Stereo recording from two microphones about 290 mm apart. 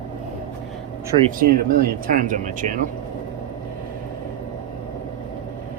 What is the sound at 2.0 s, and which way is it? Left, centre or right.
Speech, right.